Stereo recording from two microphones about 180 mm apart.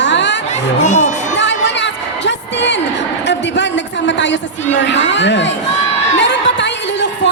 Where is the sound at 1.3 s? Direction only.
80° left.